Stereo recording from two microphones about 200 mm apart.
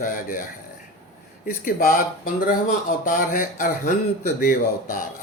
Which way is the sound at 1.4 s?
45° left (ahead or behind).